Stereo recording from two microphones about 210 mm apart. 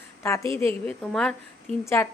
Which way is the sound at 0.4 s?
25° right (ahead or behind).